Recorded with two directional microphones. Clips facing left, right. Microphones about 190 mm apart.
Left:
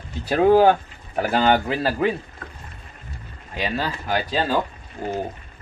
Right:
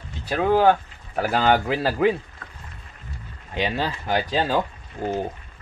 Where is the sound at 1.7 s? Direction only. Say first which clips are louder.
Right 1 dB; 15° right (ahead or behind).